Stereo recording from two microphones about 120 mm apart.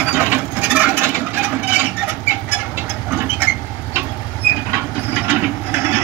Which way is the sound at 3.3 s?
15° right (ahead or behind).